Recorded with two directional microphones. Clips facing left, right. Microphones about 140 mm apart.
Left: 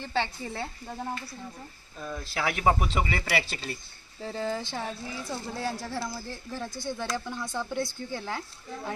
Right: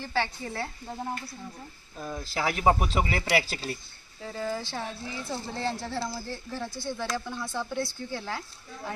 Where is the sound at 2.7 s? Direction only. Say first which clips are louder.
Right 1 dB; 5° right (ahead or behind).